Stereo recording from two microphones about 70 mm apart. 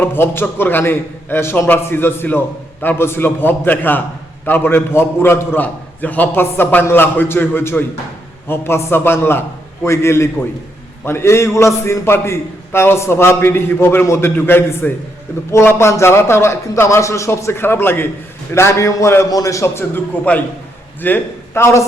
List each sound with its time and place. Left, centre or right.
0.0 s a man's voice: left
18.5 s a man's voice: left
20.3 s a man's voice: left
21.6 s a man's voice: left